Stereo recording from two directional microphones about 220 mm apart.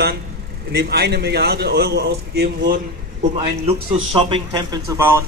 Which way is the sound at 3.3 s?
25° right (ahead or behind).